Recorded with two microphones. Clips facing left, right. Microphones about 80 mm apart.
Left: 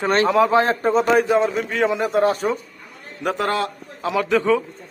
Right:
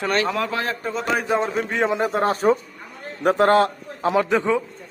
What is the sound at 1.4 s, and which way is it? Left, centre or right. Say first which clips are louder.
A man's voice: left 2 dB; right.